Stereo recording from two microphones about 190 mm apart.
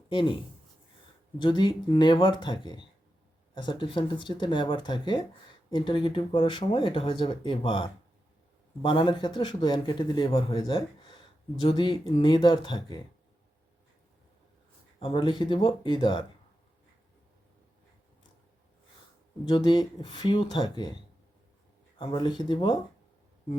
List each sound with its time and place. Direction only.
0.1 s speech: 25° left (ahead or behind)
1.4 s a man's voice: 25° left (ahead or behind)
14.9 s a man's voice: 30° left (ahead or behind)
19.5 s a man's voice: 25° left (ahead or behind)
21.9 s a man's voice: 25° left (ahead or behind)